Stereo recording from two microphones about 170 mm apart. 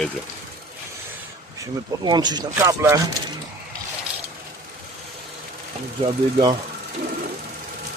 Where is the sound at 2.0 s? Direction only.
25° right (ahead or behind).